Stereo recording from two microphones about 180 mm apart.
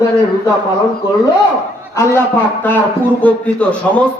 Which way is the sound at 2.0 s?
10° left (ahead or behind).